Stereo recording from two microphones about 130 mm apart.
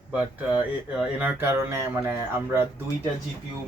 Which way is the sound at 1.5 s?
20° right (ahead or behind).